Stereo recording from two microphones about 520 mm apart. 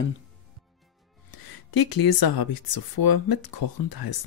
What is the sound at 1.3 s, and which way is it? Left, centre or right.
Speech, left.